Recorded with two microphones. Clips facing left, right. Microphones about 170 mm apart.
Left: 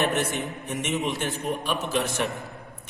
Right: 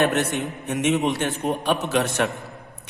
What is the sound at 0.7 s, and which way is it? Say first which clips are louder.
A man's voice: right 7 dB; 65° right (ahead or behind).